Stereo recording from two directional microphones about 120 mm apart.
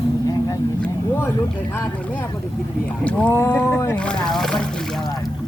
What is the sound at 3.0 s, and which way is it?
Speech, 10° left (ahead or behind).